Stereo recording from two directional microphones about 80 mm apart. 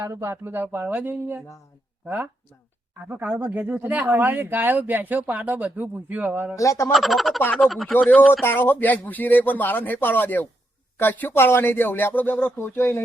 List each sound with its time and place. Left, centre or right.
0.0 s speech: right
0.4 s speech: right
3.1 s speech: right
6.6 s speech: left
6.9 s speech: centre
8.3 s speech: left